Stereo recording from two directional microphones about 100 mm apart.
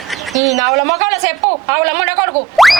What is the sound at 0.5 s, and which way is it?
Speech, 35° right (ahead or behind).